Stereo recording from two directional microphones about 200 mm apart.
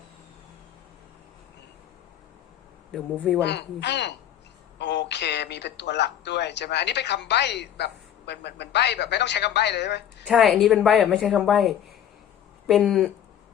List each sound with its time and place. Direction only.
2.9 s a woman's voice: centre (ahead or behind)
3.4 s speech: 60° left (ahead or behind)
10.2 s a woman's voice: centre (ahead or behind)